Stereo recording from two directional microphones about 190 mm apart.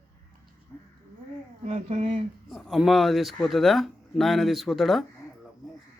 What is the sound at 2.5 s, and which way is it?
Speech, centre (ahead or behind).